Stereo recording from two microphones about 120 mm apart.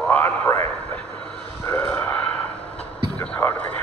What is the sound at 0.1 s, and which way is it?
Radio, 20° left (ahead or behind).